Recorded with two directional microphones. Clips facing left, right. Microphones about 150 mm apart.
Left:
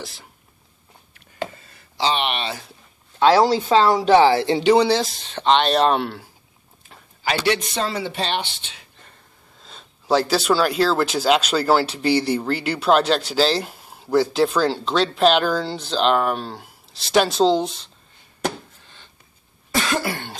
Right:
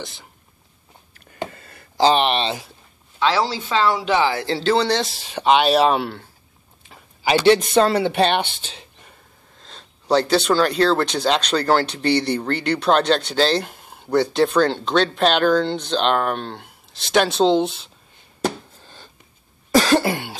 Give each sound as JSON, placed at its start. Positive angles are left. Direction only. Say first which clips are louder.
{"t": 0.0, "sound": "speech", "louder": "right 1 dB", "side_deg": 0}
{"t": 1.5, "sound": "a sound", "louder": "right 3 dB", "side_deg": -60}
{"t": 3.2, "sound": "speech", "louder": "left 5 dB", "side_deg": 45}
{"t": 4.5, "sound": "speech", "louder": "left 3 dB", "side_deg": 15}
{"t": 7.2, "sound": "speech", "louder": "right 6 dB", "side_deg": -30}
{"t": 7.7, "sound": "speech", "louder": "right 8 dB", "side_deg": -60}
{"t": 9.6, "sound": "speech", "louder": "even", "side_deg": 5}
{"t": 18.8, "sound": "a sound", "louder": "right 5 dB", "side_deg": -35}
{"t": 19.7, "sound": "cough", "louder": "right 7 dB", "side_deg": -35}